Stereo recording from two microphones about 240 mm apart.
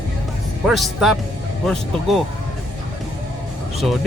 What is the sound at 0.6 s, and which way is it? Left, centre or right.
Speech, centre.